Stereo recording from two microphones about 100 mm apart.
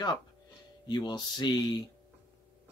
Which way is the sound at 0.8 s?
45° left (ahead or behind).